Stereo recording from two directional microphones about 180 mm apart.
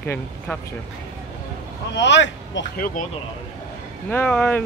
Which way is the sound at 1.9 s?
80° left.